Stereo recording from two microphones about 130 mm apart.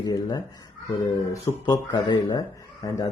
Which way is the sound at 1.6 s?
30° left (ahead or behind).